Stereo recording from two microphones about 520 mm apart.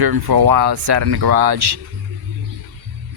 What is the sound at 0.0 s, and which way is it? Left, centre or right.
Speech, right.